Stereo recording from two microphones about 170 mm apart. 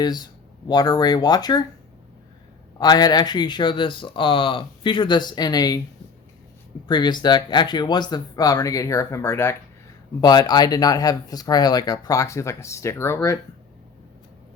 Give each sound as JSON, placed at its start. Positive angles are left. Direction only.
{"t": 0.0, "sound": "speech", "side_deg": 25}
{"t": 2.7, "sound": "speech", "side_deg": 25}
{"t": 6.8, "sound": "speech", "side_deg": 25}